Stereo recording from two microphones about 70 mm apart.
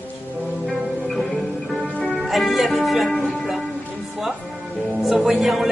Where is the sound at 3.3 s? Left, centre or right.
Centre.